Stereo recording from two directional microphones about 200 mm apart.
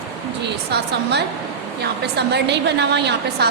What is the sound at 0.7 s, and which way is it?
A woman's voice, 55° right (ahead or behind).